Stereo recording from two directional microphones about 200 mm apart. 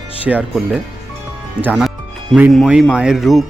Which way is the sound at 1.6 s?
Centre (ahead or behind).